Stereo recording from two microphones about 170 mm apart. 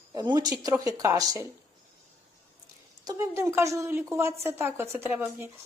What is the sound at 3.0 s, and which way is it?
A woman's voice, 15° right (ahead or behind).